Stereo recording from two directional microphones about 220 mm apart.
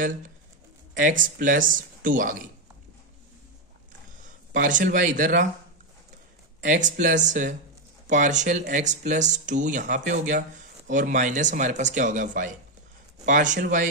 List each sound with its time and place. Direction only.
0.9 s speech: 35° right (ahead or behind)
4.5 s speech: 35° right (ahead or behind)
6.6 s speech: 35° right (ahead or behind)